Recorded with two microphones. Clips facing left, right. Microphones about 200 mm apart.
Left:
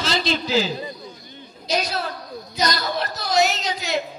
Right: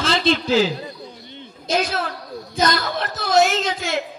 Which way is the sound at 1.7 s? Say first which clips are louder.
Right 3 dB; 50° right (ahead or behind).